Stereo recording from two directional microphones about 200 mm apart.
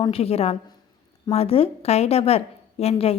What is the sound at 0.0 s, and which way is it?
A woman's voice, 30° left (ahead or behind).